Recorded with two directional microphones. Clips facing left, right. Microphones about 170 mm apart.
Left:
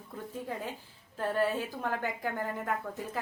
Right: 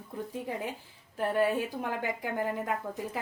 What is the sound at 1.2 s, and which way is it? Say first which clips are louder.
Speech: right 2 dB; 15° right (ahead or behind).